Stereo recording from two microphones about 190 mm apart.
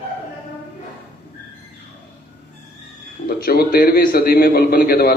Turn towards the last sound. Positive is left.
turn(degrees=50)  # may be behind; listen again after turning